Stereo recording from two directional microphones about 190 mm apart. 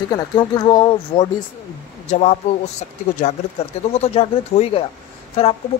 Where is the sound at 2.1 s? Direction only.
35° left (ahead or behind).